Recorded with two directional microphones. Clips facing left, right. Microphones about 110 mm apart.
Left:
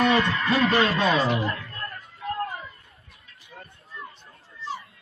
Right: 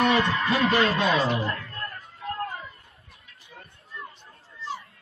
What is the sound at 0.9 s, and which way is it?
Speech, 40° left (ahead or behind).